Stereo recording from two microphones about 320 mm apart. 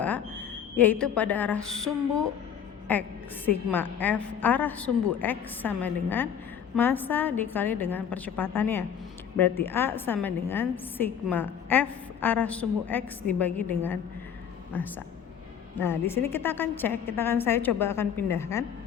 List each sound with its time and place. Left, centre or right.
0.8 s a woman's voice: centre